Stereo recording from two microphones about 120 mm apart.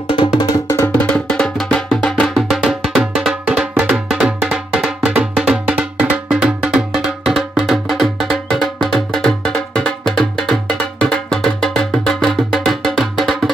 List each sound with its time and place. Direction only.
0.2 s music: 45° left (ahead or behind)
0.7 s music: 25° left (ahead or behind)
1.1 s music: 5° left (ahead or behind)
2.2 s music: centre (ahead or behind)